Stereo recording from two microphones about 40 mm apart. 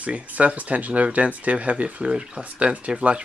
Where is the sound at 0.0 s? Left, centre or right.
Right.